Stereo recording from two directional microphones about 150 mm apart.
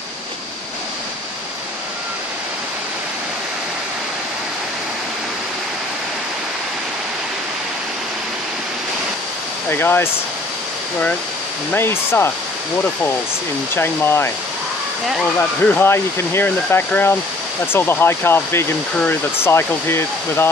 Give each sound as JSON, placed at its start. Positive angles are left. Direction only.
{"t": 9.7, "sound": "speech", "side_deg": 15}
{"t": 11.7, "sound": "speech", "side_deg": 15}
{"t": 13.7, "sound": "speech", "side_deg": 15}
{"t": 15.3, "sound": "speech", "side_deg": 15}